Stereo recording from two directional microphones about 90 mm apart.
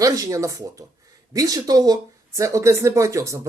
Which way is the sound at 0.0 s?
40° right (ahead or behind).